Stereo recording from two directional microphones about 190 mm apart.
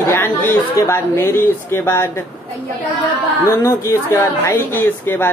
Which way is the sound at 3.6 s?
15° left (ahead or behind).